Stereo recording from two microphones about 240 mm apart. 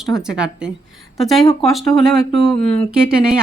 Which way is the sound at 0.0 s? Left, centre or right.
Centre.